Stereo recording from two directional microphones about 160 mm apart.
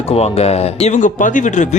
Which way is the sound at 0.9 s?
55° left (ahead or behind).